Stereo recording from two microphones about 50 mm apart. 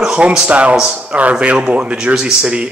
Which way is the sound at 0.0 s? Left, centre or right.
Centre.